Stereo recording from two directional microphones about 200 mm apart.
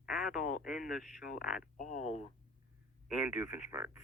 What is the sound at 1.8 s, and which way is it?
Speech, 40° left (ahead or behind).